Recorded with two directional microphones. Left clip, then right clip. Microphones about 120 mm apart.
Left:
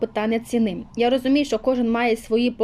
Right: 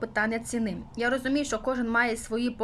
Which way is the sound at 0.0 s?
15° left (ahead or behind).